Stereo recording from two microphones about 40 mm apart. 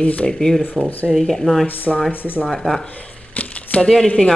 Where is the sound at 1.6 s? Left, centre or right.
Left.